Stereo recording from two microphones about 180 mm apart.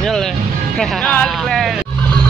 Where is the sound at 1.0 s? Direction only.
5° left (ahead or behind).